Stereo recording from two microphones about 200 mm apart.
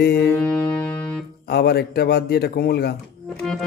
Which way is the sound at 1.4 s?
50° left (ahead or behind).